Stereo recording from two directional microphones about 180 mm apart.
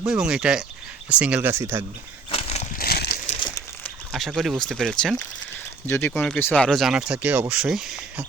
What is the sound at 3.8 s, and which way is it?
Speech, centre (ahead or behind).